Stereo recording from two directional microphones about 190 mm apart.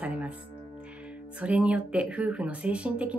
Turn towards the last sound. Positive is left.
turn(degrees=-5)  # may be behind; listen again after turning